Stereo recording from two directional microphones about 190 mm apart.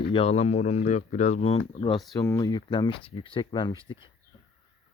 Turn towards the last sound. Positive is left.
turn(degrees=25)  # may be behind; listen again after turning